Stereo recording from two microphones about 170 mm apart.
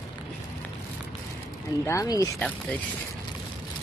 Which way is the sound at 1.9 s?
20° left (ahead or behind).